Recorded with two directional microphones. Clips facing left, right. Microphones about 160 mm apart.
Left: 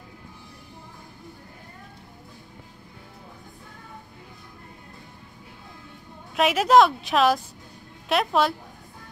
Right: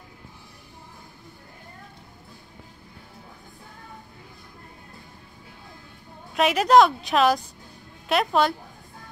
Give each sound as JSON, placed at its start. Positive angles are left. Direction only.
{"t": 6.3, "sound": "a woman's voice", "side_deg": 0}